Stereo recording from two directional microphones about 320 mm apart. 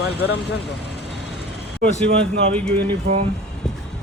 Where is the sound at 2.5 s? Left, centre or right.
Centre.